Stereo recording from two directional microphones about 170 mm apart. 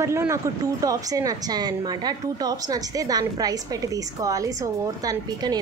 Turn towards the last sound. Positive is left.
turn(degrees=-20)  # may be behind; listen again after turning